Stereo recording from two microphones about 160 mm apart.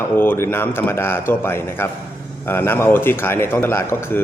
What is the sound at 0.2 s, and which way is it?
A man's voice, 15° left (ahead or behind).